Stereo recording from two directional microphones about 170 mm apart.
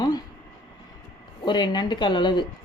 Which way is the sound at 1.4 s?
25° left (ahead or behind).